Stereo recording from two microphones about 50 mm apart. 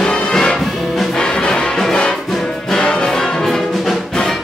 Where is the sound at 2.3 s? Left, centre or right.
Centre.